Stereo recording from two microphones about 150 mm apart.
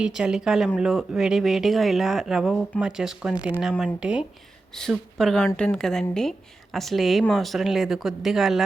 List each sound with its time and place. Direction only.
0.0 s speech: 5° right (ahead or behind)